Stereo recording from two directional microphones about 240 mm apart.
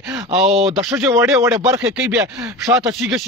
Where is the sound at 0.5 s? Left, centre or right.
Right.